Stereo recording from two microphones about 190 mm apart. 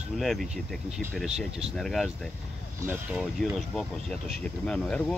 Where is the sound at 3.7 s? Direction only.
Centre (ahead or behind).